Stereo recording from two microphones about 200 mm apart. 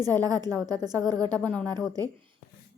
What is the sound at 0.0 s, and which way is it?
A woman's voice, 20° right (ahead or behind).